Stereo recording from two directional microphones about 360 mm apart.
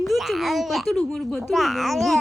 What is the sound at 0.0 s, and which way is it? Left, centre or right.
A child's voice, centre.